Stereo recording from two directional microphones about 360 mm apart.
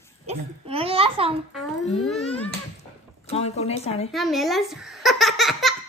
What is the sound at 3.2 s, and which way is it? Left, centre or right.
Speech, centre.